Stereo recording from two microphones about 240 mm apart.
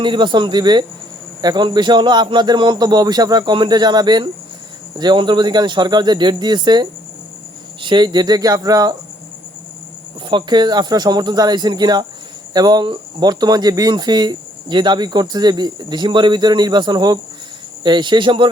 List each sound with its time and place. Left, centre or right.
0.0 s speech: centre
10.2 s speech: centre